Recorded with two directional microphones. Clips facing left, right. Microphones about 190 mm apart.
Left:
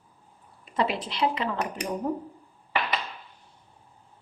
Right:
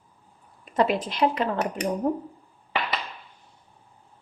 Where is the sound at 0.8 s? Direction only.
45° right (ahead or behind).